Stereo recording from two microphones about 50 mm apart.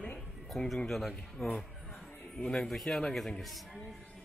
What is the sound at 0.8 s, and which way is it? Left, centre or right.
A man's voice, centre.